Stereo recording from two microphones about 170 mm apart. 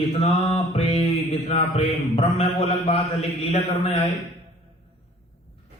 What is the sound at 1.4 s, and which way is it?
A man's voice, 35° left (ahead or behind).